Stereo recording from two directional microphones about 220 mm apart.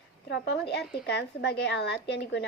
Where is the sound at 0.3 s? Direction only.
50° left (ahead or behind).